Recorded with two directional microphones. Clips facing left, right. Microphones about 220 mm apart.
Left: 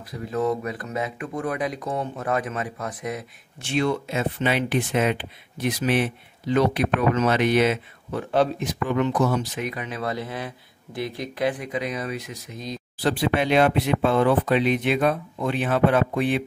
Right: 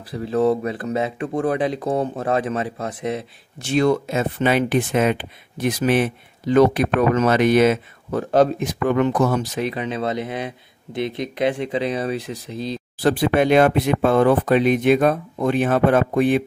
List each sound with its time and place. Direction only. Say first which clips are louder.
0.1 s speech: right 6 dB; 30° right (ahead or behind)
3.5 s speech: right 6 dB; 40° right (ahead or behind)
9.6 s speech: right 6 dB; 30° right (ahead or behind)
13.0 s speech: right 5 dB; 50° right (ahead or behind)